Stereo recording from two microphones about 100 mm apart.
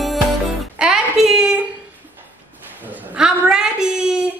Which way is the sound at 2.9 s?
10° right (ahead or behind).